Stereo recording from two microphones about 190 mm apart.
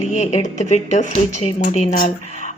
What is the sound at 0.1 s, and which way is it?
Speech, 35° left (ahead or behind).